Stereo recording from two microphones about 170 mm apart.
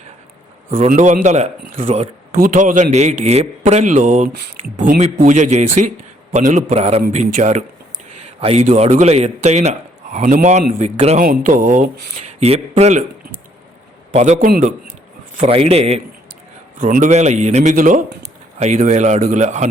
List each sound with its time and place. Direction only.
0.9 s a man's voice: 50° right (ahead or behind)
8.4 s a man's voice: 35° right (ahead or behind)
11.2 s a man's voice: 50° right (ahead or behind)
14.1 s a man's voice: 40° right (ahead or behind)
14.3 s a man's voice: 60° right (ahead or behind)
15.4 s a man's voice: 35° right (ahead or behind)